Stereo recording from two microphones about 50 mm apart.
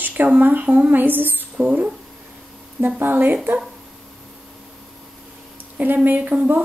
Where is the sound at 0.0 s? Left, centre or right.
Right.